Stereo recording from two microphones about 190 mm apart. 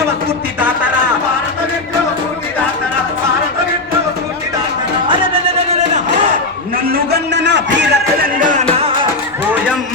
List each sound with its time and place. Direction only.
5.0 s music: 25° right (ahead or behind)
6.9 s a sound: 60° right (ahead or behind)
8.4 s music: 45° right (ahead or behind)